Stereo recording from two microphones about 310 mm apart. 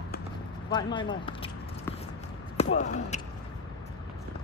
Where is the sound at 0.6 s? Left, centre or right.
Centre.